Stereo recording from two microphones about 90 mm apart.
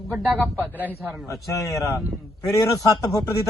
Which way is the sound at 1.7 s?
35° left (ahead or behind).